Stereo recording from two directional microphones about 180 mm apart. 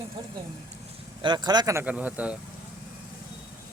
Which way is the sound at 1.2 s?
25° right (ahead or behind).